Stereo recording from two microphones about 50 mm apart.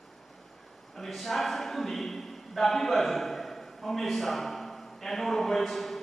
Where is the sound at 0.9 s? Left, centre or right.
Centre.